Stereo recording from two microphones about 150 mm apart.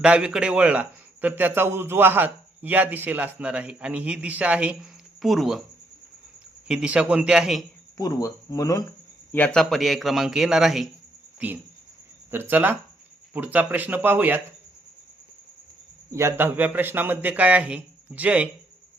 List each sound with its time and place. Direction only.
0.0 s a man's voice: 5° right (ahead or behind)
6.7 s a man's voice: 5° right (ahead or behind)
7.9 s speech: 25° left (ahead or behind)
9.3 s a man's voice: 10° left (ahead or behind); by 14.4 s 10° right (ahead or behind)
16.1 s a man's voice: 15° right (ahead or behind)